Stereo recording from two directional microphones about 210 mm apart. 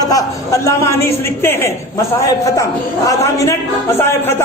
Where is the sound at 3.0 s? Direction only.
15° left (ahead or behind).